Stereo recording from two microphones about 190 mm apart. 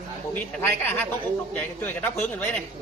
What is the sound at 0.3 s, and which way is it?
A man's voice, 10° left (ahead or behind).